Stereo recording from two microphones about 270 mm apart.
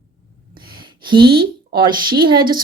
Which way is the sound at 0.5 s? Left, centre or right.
Right.